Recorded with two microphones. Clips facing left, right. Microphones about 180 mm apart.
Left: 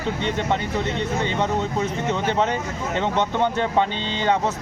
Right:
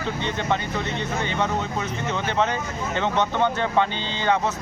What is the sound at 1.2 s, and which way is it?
Speech, 30° left (ahead or behind).